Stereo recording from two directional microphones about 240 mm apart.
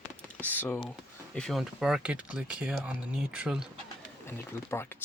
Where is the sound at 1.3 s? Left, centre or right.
Centre.